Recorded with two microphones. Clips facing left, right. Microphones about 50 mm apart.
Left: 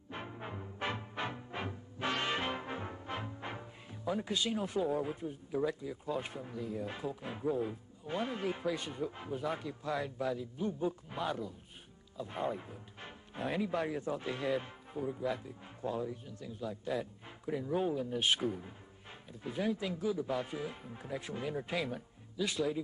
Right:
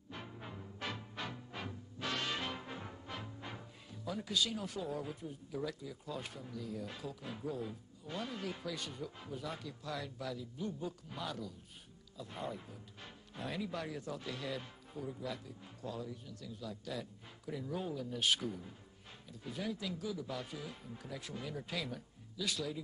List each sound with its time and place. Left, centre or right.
0.1 s music: left
12.2 s speech: left